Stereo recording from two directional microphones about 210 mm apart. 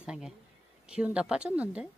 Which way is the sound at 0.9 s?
5° right (ahead or behind).